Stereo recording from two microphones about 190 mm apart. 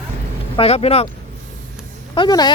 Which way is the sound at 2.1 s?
25° left (ahead or behind).